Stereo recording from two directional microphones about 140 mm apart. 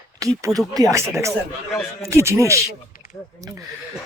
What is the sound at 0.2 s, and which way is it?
Speech, 25° right (ahead or behind).